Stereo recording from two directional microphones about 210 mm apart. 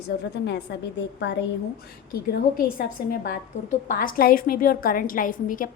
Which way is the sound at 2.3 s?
50° left (ahead or behind).